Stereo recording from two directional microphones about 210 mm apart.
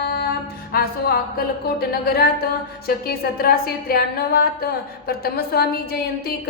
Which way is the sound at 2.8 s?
45° left (ahead or behind).